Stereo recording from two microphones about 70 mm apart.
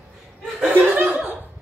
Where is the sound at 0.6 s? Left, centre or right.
Right.